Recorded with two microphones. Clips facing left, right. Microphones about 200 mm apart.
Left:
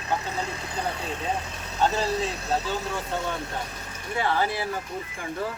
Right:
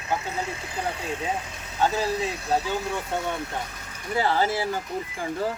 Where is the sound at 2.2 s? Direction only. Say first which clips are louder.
Even; 40° left (ahead or behind).